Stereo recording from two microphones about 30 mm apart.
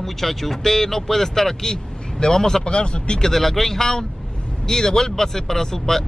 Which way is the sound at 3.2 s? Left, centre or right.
Centre.